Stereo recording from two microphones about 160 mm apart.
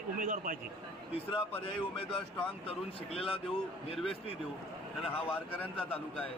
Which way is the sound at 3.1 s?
35° left (ahead or behind).